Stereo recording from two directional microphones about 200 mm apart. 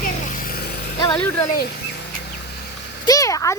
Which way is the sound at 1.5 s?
55° left (ahead or behind).